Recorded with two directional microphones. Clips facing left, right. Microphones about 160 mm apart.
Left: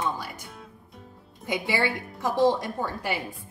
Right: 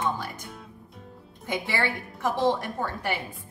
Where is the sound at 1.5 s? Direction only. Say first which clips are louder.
Left 2 dB; 15° left (ahead or behind).